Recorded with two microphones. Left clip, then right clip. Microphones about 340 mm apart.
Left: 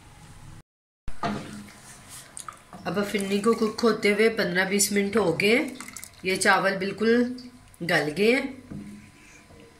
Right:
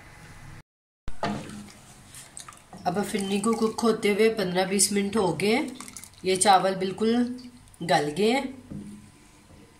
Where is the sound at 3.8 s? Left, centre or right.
Centre.